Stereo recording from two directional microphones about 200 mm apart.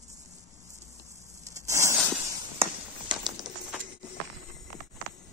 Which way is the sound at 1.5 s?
15° right (ahead or behind).